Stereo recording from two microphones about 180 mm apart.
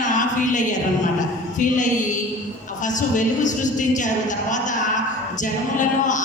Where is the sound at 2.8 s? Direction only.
45° left (ahead or behind).